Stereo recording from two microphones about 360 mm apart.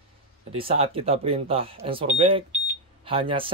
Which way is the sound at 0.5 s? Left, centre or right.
Centre.